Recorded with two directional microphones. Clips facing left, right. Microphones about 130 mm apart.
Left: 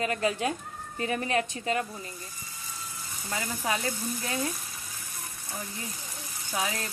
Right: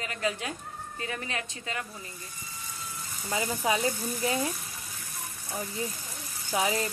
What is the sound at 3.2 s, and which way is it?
Speech, 10° right (ahead or behind).